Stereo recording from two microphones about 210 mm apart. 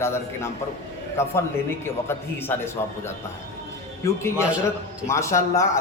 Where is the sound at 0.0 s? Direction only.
10° left (ahead or behind).